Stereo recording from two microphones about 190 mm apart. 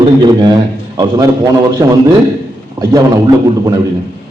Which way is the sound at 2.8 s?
20° right (ahead or behind).